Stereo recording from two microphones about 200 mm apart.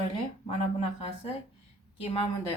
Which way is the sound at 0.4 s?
30° left (ahead or behind).